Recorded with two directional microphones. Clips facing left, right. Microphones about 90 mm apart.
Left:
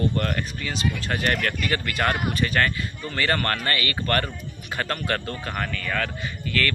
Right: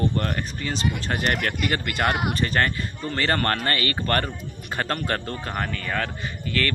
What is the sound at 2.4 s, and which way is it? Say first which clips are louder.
Speech: even; 30° right (ahead or behind).